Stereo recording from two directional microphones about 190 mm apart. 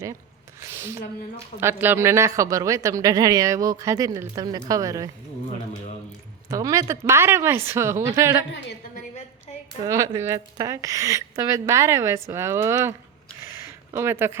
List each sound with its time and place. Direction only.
0.6 s a sound: 15° right (ahead or behind)
1.6 s a woman's voice: 10° right (ahead or behind)
6.5 s a woman's voice: 15° right (ahead or behind)
9.8 s a woman's voice: 15° right (ahead or behind)
13.9 s a woman's voice: 15° right (ahead or behind)